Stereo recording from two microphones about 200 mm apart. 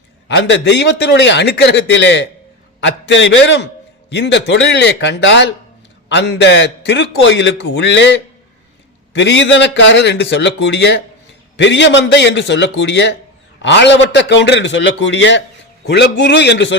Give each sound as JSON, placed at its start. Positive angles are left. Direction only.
{"t": 0.3, "sound": "a man's voice", "side_deg": 60}